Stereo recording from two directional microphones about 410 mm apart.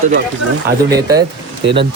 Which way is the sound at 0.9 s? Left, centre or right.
Centre.